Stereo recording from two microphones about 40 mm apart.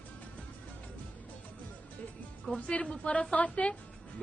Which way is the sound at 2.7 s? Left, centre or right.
Left.